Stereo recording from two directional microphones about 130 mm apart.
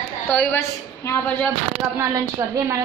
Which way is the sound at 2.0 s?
30° right (ahead or behind).